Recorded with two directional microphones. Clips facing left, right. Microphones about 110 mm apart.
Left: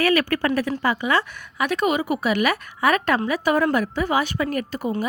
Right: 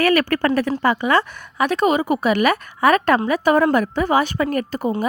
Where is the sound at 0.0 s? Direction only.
55° right (ahead or behind).